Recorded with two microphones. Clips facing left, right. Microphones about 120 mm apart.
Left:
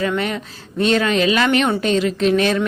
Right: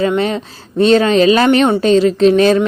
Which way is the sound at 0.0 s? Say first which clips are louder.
Right 6 dB; 25° right (ahead or behind).